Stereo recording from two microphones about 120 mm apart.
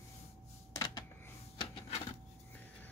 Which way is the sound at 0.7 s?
35° left (ahead or behind).